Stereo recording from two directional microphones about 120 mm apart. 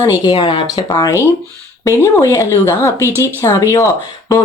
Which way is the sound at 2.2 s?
25° left (ahead or behind).